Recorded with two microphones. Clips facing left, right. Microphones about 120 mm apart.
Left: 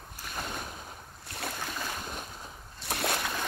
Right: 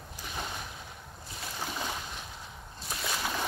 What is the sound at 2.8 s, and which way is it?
Slosh, 65° left (ahead or behind).